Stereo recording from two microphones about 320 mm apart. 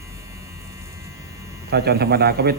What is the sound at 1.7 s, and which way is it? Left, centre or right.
Speech, right.